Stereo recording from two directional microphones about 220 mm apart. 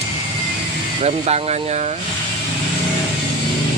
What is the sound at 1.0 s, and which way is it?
Speech, 30° right (ahead or behind).